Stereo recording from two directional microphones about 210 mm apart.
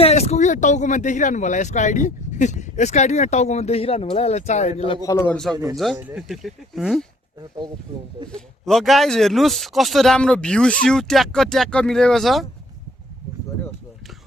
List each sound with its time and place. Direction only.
0.0 s speech: 30° left (ahead or behind)
5.0 s a man's voice: 15° left (ahead or behind)
5.7 s speech: centre (ahead or behind)
8.3 s speech: centre (ahead or behind)